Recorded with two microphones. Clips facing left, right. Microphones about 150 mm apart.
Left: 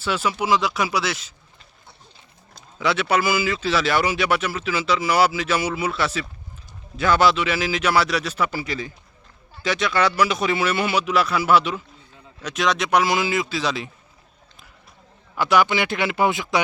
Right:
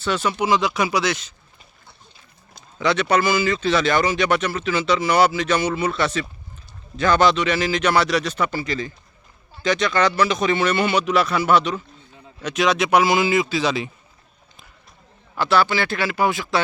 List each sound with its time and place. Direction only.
0.0 s speech: 5° left (ahead or behind)
2.7 s speech: 5° left (ahead or behind)
15.4 s a man's voice: 15° left (ahead or behind)